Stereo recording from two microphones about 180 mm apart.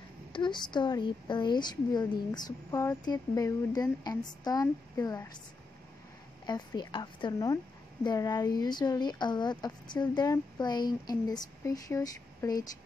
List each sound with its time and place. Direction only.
0.3 s speech: 25° left (ahead or behind)
6.4 s speech: 25° left (ahead or behind)